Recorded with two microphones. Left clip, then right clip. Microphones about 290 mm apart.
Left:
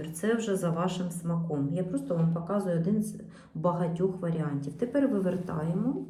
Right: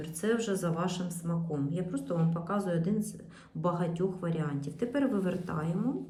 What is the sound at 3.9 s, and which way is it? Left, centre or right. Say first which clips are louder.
Speech: left 3 dB; centre.